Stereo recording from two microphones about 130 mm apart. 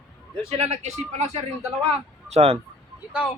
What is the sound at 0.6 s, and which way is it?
Speech, 60° right (ahead or behind).